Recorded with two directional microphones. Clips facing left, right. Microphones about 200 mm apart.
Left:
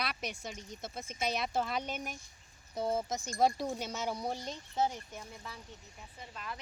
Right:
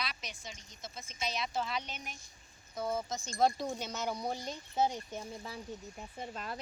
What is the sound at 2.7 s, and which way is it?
Speech, 30° left (ahead or behind).